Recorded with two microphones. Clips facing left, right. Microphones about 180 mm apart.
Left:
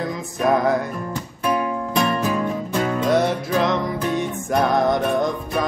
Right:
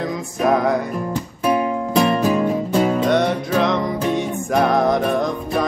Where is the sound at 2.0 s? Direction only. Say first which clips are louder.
Right 4 dB; 30° right (ahead or behind).